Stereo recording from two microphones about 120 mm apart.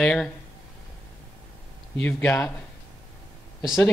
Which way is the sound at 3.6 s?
5° right (ahead or behind).